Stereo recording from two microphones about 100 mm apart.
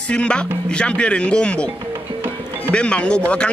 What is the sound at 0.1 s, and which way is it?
Speech, 10° left (ahead or behind).